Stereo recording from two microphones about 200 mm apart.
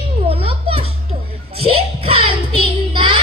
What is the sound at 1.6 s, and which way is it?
Child singing, 30° right (ahead or behind).